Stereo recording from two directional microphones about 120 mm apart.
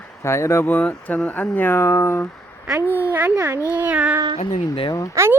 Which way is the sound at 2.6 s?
15° right (ahead or behind).